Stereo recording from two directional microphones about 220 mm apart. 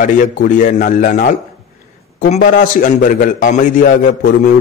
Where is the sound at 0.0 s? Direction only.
35° left (ahead or behind).